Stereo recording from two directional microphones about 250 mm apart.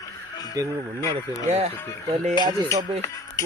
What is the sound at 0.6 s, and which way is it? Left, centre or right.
Speech, centre.